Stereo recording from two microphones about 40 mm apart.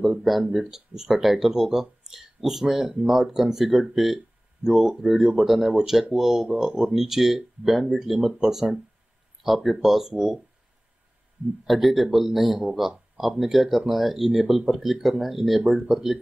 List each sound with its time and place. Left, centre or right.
0.2 s speech: centre
11.6 s speech: centre